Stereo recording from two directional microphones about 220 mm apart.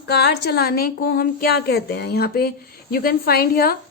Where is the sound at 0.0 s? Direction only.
50° left (ahead or behind).